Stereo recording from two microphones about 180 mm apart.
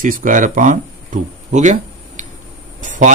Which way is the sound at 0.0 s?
50° right (ahead or behind).